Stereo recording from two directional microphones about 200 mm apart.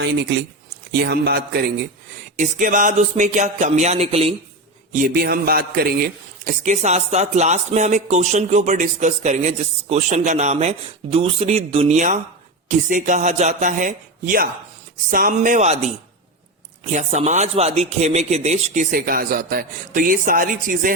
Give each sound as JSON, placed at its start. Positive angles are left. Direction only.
{"t": 0.0, "sound": "speech", "side_deg": -60}
{"t": 1.0, "sound": "a sound", "side_deg": -55}
{"t": 2.3, "sound": "speech", "side_deg": -40}
{"t": 4.9, "sound": "a sound", "side_deg": -45}
{"t": 6.4, "sound": "speech", "side_deg": -40}
{"t": 16.9, "sound": "speech", "side_deg": -35}